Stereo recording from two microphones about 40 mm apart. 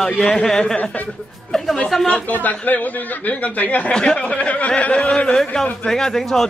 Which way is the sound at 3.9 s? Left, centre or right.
Left.